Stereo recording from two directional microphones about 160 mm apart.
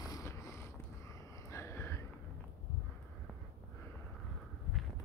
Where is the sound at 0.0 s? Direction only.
20° left (ahead or behind).